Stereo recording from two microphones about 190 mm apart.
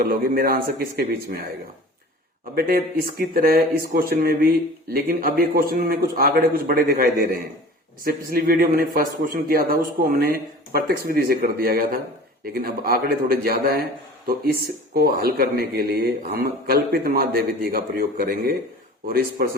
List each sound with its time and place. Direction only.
0.0 s speech: 50° right (ahead or behind)
2.6 s speech: 50° right (ahead or behind)
14.9 s speech: 55° right (ahead or behind)